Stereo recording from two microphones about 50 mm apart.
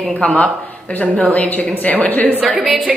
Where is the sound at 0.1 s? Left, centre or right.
Left.